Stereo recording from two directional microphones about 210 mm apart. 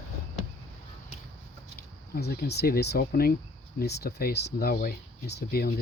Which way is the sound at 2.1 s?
45° left (ahead or behind).